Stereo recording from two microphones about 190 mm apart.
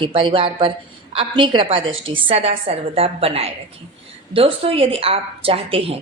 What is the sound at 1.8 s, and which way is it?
Speech, 90° right.